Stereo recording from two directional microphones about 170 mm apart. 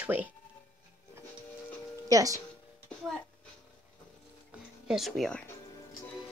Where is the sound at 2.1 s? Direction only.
20° right (ahead or behind).